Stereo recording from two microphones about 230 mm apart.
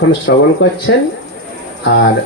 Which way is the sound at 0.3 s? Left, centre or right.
Left.